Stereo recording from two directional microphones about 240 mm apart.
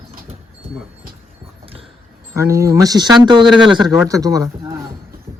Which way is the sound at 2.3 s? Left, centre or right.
Centre.